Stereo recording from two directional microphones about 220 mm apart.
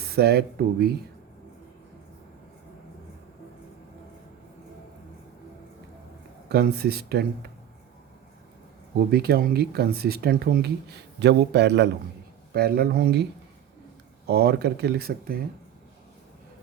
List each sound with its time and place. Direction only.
0.0 s speech: 45° right (ahead or behind)
6.5 s speech: 45° right (ahead or behind)
9.0 s speech: 45° right (ahead or behind)
14.3 s speech: 45° right (ahead or behind)